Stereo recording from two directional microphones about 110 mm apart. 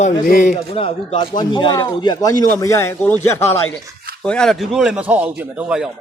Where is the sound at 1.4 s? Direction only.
45° left (ahead or behind); by 3.7 s 20° left (ahead or behind).